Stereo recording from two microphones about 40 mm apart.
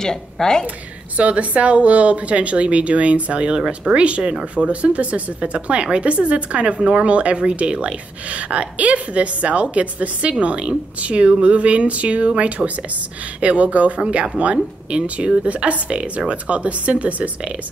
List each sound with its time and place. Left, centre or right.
0.0 s a woman's voice: centre
1.1 s speech: right
14.0 s speech: right